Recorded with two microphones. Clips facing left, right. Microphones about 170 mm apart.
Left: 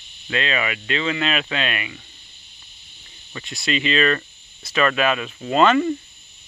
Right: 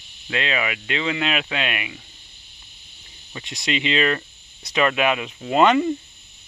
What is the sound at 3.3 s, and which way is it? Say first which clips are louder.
Speech: left 1 dB; 20° right (ahead or behind).